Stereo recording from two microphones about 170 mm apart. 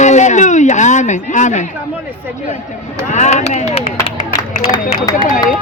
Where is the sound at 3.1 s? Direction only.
45° left (ahead or behind).